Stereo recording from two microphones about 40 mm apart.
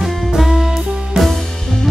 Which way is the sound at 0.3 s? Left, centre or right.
Centre.